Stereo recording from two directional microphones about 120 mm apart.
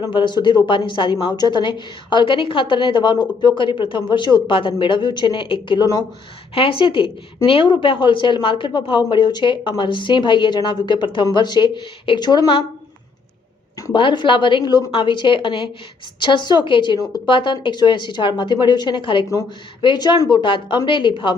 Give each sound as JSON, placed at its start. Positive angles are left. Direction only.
{"t": 0.1, "sound": "a woman's voice", "side_deg": 40}
{"t": 6.5, "sound": "a woman's voice", "side_deg": 45}
{"t": 13.9, "sound": "a woman's voice", "side_deg": 40}